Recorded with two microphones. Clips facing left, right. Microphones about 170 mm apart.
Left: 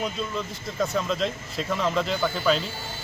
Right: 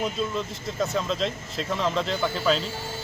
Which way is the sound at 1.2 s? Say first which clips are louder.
Even; 5° left (ahead or behind).